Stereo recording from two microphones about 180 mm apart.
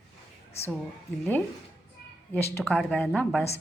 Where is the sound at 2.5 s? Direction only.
10° left (ahead or behind).